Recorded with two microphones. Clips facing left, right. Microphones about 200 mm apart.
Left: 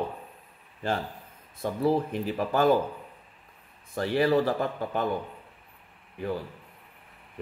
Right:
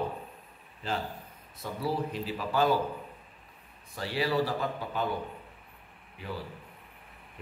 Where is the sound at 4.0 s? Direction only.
50° left (ahead or behind).